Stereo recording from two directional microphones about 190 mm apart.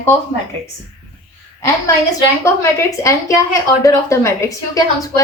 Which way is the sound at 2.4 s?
15° left (ahead or behind).